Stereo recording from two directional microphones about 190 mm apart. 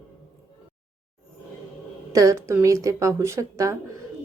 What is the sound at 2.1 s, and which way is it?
A woman's voice, 15° right (ahead or behind).